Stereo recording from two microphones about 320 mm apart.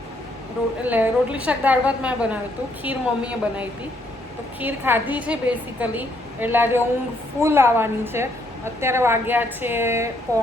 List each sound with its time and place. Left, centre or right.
0.9 s a woman's voice: centre